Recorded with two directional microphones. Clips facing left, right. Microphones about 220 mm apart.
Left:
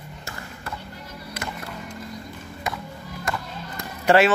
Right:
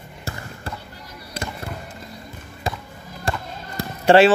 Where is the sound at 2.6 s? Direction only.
30° right (ahead or behind).